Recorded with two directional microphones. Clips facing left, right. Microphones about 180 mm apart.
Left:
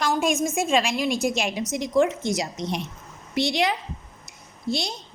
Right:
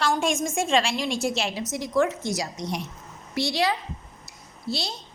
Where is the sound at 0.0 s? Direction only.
10° left (ahead or behind).